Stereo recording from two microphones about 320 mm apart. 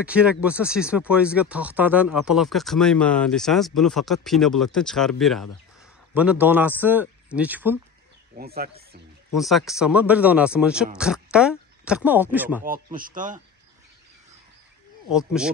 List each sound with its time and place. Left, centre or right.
0.0 s speech: centre
8.4 s speech: right
9.3 s speech: centre
12.6 s speech: right
15.0 s speech: centre